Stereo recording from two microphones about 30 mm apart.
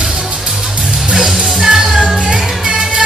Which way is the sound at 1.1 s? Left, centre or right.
Centre.